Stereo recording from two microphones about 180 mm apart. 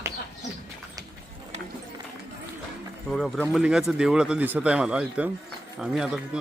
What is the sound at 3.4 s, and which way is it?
A man's voice, 10° right (ahead or behind).